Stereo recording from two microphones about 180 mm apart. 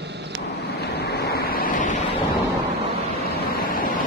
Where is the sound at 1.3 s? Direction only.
55° left (ahead or behind).